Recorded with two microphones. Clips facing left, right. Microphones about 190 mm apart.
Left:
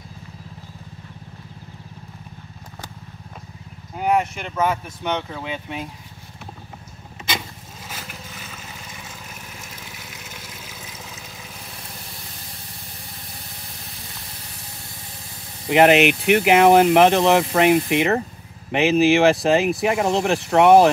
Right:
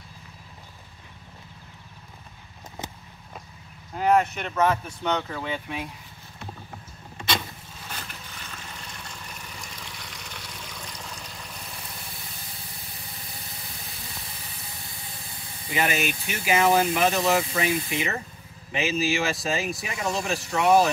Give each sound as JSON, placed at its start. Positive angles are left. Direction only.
{"t": 3.9, "sound": "speech", "side_deg": 5}
{"t": 5.1, "sound": "speech", "side_deg": 20}
{"t": 7.2, "sound": "vehicle", "side_deg": 5}
{"t": 15.7, "sound": "speech", "side_deg": 70}